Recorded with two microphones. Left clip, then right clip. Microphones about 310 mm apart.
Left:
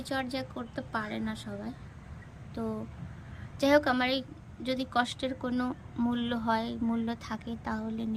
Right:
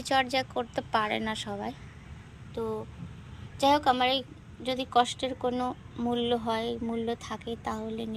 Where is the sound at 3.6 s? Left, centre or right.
Centre.